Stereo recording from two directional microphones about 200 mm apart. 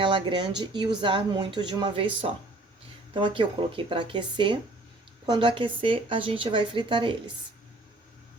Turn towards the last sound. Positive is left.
turn(degrees=-25)  # may be behind; listen again after turning